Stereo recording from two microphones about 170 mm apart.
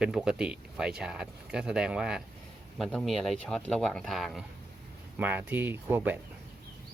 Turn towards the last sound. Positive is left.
turn(degrees=-10)  # may be behind; listen again after turning